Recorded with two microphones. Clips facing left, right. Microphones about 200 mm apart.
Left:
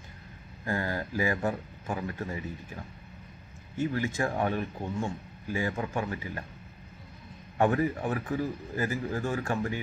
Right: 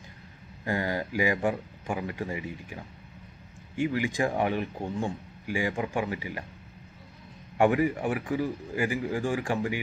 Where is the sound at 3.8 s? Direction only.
15° right (ahead or behind).